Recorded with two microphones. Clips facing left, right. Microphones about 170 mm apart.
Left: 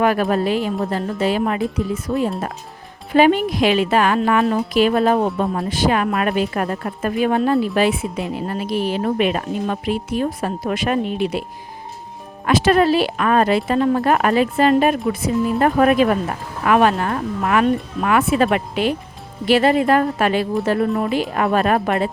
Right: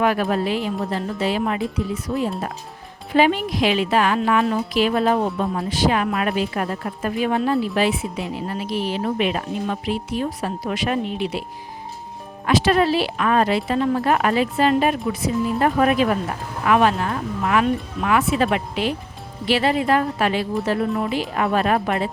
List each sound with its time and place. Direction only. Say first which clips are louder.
0.0 s a woman's voice: left 3 dB; 45° left (ahead or behind)
3.2 s a woman's voice: left 4 dB; 50° left (ahead or behind)
12.5 s a woman's voice: left 3 dB; 50° left (ahead or behind)